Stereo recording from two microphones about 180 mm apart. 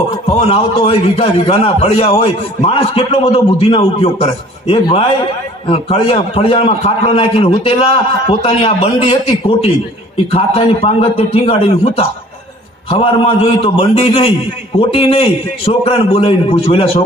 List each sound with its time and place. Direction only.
0.3 s a man's voice: 30° left (ahead or behind)